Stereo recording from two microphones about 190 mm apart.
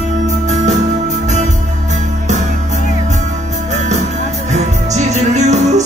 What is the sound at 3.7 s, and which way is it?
Music, 40° right (ahead or behind).